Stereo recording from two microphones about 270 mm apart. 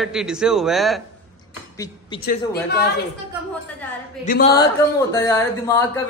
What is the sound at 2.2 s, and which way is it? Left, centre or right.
Speech, left.